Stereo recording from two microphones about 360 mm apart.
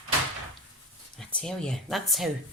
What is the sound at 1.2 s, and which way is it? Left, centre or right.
Speech, centre.